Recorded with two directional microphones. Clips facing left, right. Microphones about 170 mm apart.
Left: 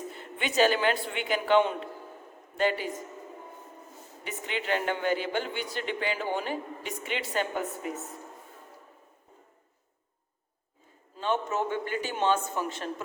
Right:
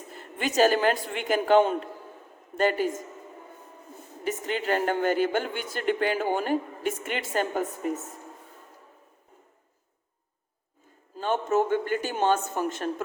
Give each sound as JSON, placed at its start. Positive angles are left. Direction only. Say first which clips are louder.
{"t": 0.1, "sound": "speech", "louder": "right 3 dB", "side_deg": -40}
{"t": 4.2, "sound": "speech", "louder": "right 6 dB", "side_deg": -40}
{"t": 11.2, "sound": "speech", "louder": "right 4 dB", "side_deg": -45}